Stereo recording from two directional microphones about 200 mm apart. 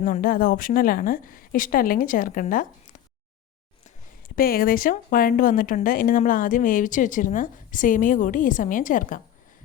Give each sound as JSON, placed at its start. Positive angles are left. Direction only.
{"t": 0.0, "sound": "a woman's voice", "side_deg": 45}
{"t": 4.4, "sound": "speech", "side_deg": 45}